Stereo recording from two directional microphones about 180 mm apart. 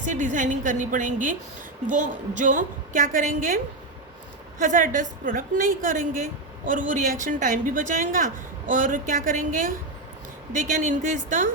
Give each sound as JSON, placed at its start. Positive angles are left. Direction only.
{"t": 0.0, "sound": "a woman's voice", "side_deg": -45}